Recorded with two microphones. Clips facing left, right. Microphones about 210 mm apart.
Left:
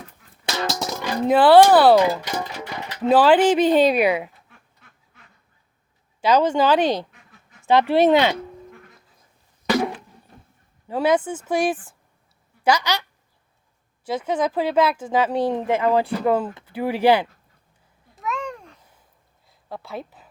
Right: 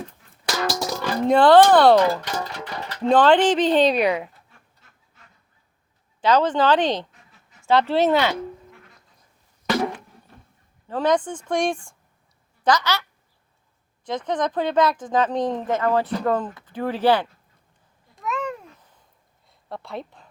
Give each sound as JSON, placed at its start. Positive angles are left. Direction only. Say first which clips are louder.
{"t": 0.4, "sound": "music", "louder": "right 1 dB", "side_deg": 20}
{"t": 1.3, "sound": "speech", "louder": "left 1 dB", "side_deg": 5}
{"t": 6.2, "sound": "speech", "louder": "left 1 dB", "side_deg": 10}
{"t": 10.8, "sound": "speech", "louder": "left 1 dB", "side_deg": 10}
{"t": 18.1, "sound": "babbling", "louder": "right 1 dB", "side_deg": 0}
{"t": 19.5, "sound": "speech", "louder": "even", "side_deg": 0}